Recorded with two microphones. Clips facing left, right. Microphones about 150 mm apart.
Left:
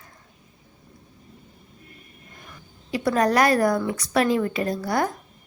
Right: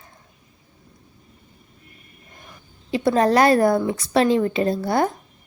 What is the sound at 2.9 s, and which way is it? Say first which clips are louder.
A woman's voice: right 3 dB; 25° right (ahead or behind).